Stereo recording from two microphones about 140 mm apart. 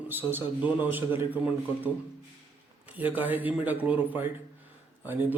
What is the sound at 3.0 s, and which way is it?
A man's voice, 10° right (ahead or behind).